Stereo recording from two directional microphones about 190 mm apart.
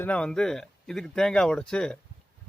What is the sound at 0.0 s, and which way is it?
Speech, 5° left (ahead or behind).